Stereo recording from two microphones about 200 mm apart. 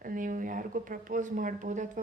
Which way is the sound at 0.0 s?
45° right (ahead or behind).